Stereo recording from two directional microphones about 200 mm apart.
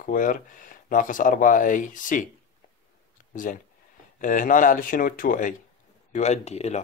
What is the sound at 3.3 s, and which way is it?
A man's voice, 40° left (ahead or behind).